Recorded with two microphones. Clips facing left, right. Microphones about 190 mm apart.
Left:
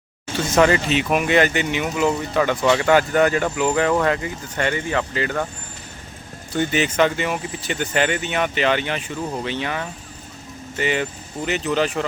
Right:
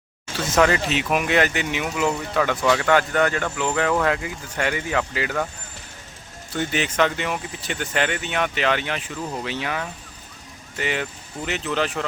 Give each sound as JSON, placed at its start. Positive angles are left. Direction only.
{"t": 0.3, "sound": "speech", "side_deg": 0}
{"t": 6.6, "sound": "speech", "side_deg": 0}